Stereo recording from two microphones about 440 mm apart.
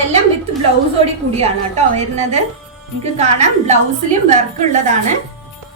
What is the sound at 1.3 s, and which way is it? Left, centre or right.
A woman's voice, centre.